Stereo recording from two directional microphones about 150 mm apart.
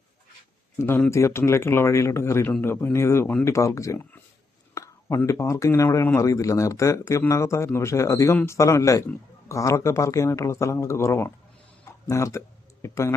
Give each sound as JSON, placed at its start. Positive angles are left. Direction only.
{"t": 0.8, "sound": "speech", "side_deg": 15}
{"t": 11.9, "sound": "a sound", "side_deg": 20}
{"t": 12.8, "sound": "speech", "side_deg": 20}